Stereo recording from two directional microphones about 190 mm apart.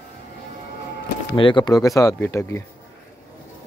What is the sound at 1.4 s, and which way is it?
Speech, 25° left (ahead or behind).